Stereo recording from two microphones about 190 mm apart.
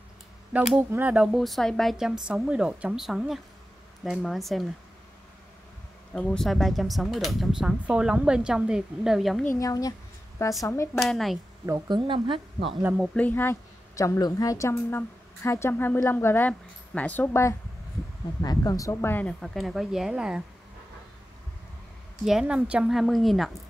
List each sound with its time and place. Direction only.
0.7 s speech: 5° right (ahead or behind)
6.1 s speech: centre (ahead or behind)
9.6 s a woman's voice: 20° left (ahead or behind)
11.0 s speech: centre (ahead or behind)
11.6 s speech: 20° right (ahead or behind)
12.8 s speech: 5° right (ahead or behind)
13.1 s a woman's voice: 10° left (ahead or behind)
22.2 s speech: 5° right (ahead or behind)